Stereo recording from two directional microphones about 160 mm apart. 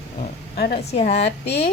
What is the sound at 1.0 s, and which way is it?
Speech, 90° left.